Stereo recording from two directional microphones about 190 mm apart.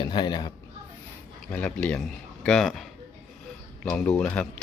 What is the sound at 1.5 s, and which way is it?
Speech, 10° left (ahead or behind).